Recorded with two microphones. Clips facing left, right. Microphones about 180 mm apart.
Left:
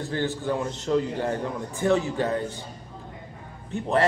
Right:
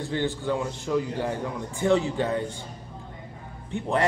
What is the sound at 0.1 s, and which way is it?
A man's voice, 15° right (ahead or behind).